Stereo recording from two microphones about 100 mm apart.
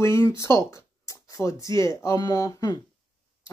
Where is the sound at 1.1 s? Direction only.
30° left (ahead or behind).